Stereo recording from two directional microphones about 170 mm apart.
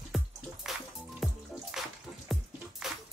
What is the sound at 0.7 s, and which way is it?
Music, centre (ahead or behind).